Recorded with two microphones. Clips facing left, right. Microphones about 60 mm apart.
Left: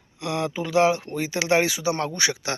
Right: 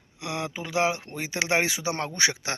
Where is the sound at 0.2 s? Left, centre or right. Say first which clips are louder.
Left 5 dB; centre.